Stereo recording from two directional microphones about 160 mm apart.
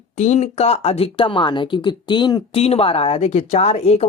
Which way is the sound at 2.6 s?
40° left (ahead or behind).